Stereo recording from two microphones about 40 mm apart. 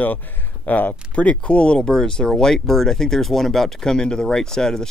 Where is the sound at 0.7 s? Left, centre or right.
Left.